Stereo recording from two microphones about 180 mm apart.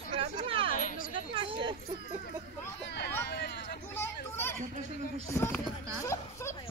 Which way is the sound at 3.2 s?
70° left (ahead or behind).